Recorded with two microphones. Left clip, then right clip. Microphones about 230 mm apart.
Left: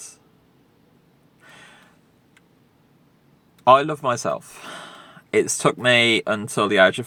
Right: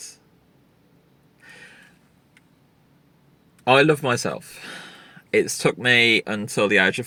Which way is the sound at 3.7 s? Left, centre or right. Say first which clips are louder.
Left 1 dB; left.